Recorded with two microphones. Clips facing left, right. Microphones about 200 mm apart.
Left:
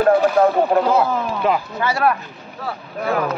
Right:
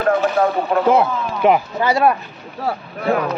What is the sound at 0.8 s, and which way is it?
Speech, 20° right (ahead or behind).